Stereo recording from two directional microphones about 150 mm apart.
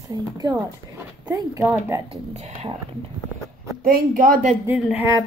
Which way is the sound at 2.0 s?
45° right (ahead or behind).